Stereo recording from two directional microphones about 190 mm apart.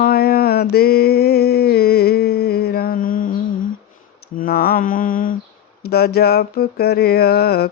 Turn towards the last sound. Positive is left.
turn(degrees=55)  # may be behind; listen again after turning